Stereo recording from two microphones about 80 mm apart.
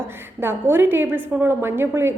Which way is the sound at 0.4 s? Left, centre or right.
Right.